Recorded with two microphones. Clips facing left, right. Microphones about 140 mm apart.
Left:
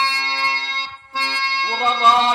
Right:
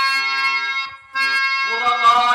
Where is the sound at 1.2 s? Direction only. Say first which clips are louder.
Left 1 dB; 30° left (ahead or behind).